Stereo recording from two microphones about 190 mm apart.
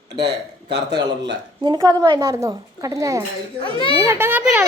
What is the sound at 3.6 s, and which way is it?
Speech, 25° left (ahead or behind).